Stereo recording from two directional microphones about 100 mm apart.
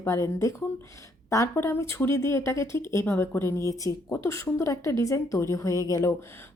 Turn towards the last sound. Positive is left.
turn(degrees=35)  # may be behind; listen again after turning